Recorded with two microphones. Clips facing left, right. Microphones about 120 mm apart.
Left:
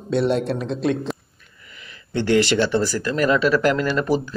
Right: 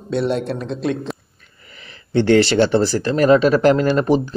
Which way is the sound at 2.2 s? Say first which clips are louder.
Right 3 dB; 35° right (ahead or behind).